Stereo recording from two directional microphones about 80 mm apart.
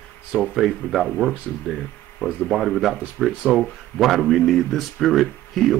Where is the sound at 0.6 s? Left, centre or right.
Centre.